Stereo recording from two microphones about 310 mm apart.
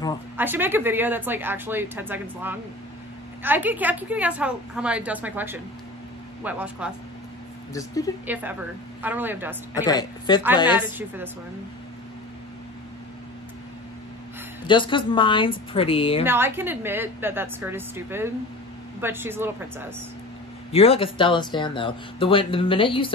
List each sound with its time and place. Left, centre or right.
0.4 s a woman's voice: centre
7.7 s speech: centre
8.3 s a woman's voice: centre
9.8 s speech: centre
10.7 s speech: centre
14.7 s speech: centre
16.3 s speech: centre
20.7 s speech: centre